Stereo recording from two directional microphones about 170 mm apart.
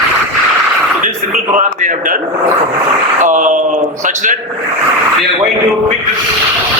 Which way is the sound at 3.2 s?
50° right (ahead or behind).